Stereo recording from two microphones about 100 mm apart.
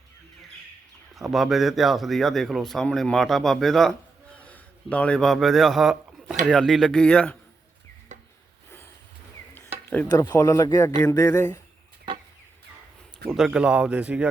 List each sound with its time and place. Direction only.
1.1 s speech: centre (ahead or behind)
4.4 s a sound: 15° left (ahead or behind); by 6.3 s 5° right (ahead or behind)
6.5 s speech: 5° left (ahead or behind)
10.1 s speech: 40° left (ahead or behind)
13.3 s speech: 5° right (ahead or behind)